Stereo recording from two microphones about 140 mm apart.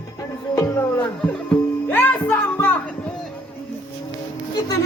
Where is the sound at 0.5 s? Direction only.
20° left (ahead or behind).